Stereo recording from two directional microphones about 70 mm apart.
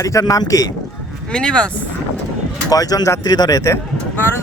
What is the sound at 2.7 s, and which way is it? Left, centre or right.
Speech, left.